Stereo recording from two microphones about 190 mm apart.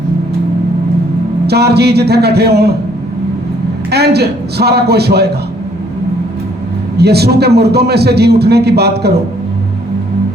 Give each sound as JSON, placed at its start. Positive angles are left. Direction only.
{"t": 1.5, "sound": "a man's voice", "side_deg": -60}
{"t": 3.9, "sound": "a man's voice", "side_deg": -60}
{"t": 6.9, "sound": "a man's voice", "side_deg": -60}